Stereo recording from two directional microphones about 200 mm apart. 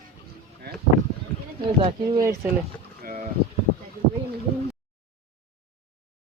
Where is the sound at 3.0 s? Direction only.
45° right (ahead or behind).